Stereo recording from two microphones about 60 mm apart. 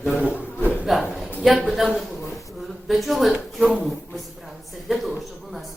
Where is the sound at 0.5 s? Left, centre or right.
Left.